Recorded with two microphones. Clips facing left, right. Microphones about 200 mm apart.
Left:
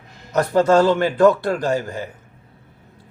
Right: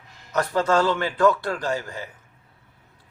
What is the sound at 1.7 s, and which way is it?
Speech, 45° left (ahead or behind).